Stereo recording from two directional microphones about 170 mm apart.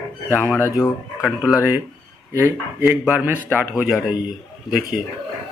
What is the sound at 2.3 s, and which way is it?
Speech, 15° right (ahead or behind).